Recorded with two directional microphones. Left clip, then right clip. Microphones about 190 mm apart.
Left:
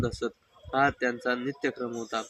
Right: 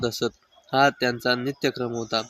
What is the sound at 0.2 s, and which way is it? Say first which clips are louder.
Speech: right 6 dB; 30° right (ahead or behind).